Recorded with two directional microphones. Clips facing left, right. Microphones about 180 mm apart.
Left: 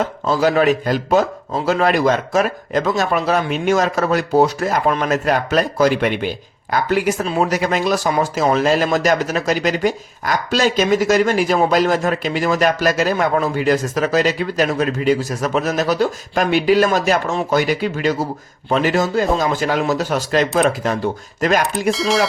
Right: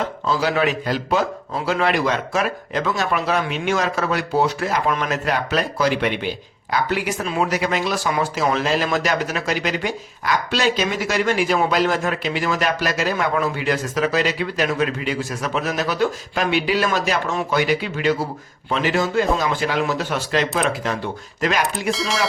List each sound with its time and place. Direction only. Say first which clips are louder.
0.3 s speech: left 5 dB; 45° left (ahead or behind)
21.8 s speech: left 5 dB; centre (ahead or behind)